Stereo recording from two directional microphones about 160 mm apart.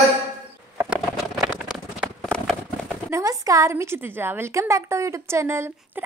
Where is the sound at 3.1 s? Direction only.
20° right (ahead or behind).